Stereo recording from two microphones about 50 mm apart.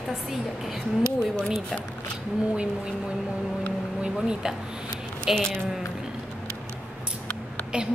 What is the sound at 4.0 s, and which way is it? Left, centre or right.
Speech, centre.